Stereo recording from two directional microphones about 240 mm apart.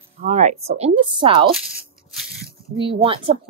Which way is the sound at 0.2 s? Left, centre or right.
Right.